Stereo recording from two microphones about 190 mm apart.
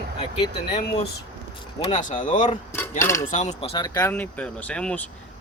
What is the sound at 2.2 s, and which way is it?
Speech, 40° left (ahead or behind).